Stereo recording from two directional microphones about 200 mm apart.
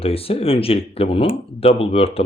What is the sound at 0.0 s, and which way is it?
Speech, 30° left (ahead or behind).